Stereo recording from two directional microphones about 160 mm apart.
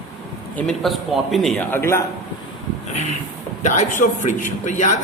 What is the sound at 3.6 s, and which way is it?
A man's voice, 50° left (ahead or behind).